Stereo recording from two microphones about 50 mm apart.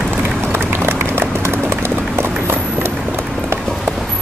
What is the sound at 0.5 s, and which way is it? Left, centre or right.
Run, right.